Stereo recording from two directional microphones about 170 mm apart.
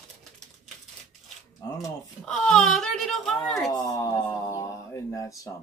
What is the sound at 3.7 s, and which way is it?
Speech, 20° left (ahead or behind).